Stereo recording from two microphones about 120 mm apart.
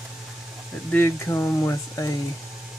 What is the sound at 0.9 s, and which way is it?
Speech, 20° left (ahead or behind).